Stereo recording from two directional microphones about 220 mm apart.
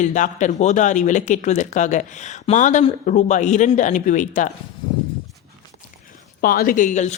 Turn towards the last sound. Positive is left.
turn(degrees=35)  # may be behind; listen again after turning